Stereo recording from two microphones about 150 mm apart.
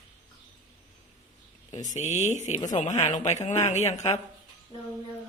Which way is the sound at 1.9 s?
55° left (ahead or behind).